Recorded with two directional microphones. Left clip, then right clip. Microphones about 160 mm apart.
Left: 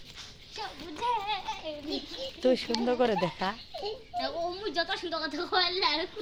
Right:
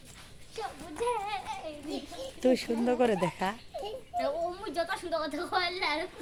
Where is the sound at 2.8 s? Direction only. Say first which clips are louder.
Even; 10° right (ahead or behind).